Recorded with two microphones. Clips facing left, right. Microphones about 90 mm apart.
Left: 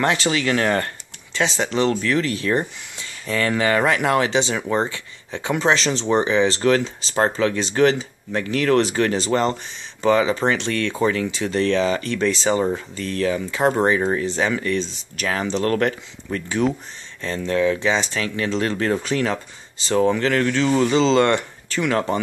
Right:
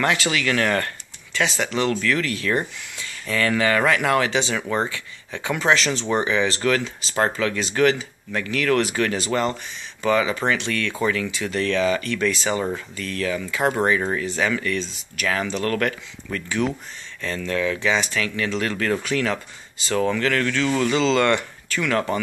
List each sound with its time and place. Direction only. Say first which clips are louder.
0.0 s speech: left 2 dB; 30° left (ahead or behind)